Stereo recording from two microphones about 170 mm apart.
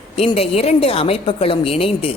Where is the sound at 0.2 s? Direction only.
35° left (ahead or behind).